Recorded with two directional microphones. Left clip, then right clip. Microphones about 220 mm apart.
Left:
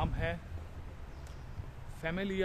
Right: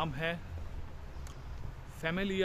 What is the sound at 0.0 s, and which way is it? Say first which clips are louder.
Speech: right 2 dB; 10° right (ahead or behind).